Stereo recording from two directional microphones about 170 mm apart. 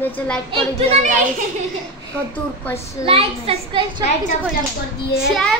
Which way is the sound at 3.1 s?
35° right (ahead or behind).